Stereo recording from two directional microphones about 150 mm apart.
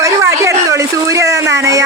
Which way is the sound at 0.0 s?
20° right (ahead or behind).